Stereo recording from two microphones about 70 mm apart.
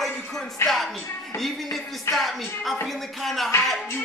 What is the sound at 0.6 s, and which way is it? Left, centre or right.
Music, left.